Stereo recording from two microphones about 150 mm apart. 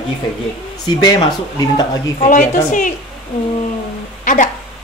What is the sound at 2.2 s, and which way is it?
Speech, 55° left (ahead or behind).